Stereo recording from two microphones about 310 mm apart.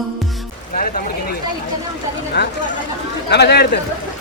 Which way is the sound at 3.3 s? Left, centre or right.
Left.